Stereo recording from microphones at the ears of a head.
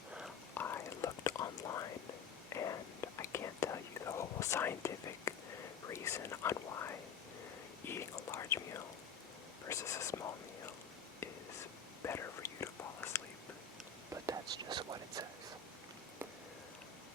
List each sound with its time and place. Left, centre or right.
0.5 s whispering: left
14.3 s whispering: right